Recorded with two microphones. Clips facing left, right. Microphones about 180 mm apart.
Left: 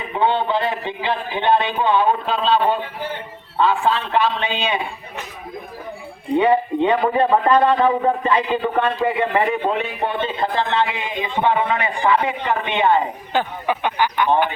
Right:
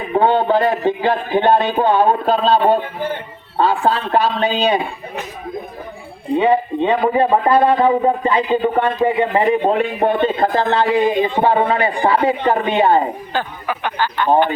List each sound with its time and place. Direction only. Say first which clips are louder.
0.1 s speech: right 5 dB; 45° right (ahead or behind)
6.3 s speech: right 1 dB; 15° right (ahead or behind)
7.5 s speech: right 3 dB; 30° right (ahead or behind)
7.8 s speech: right 3 dB; 15° right (ahead or behind)
9.6 s speech: right 6 dB; 45° right (ahead or behind)
13.3 s speech: left 2 dB; 20° left (ahead or behind)